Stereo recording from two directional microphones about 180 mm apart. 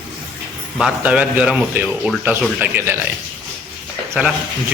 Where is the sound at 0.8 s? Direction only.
5° right (ahead or behind).